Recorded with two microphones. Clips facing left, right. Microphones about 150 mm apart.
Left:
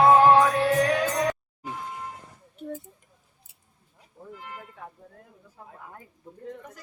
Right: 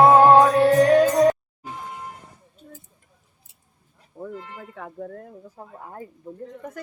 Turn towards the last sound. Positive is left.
turn(degrees=-35)  # may be behind; listen again after turning